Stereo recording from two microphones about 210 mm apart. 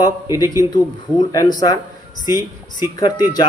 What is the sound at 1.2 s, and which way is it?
Speech, 20° left (ahead or behind).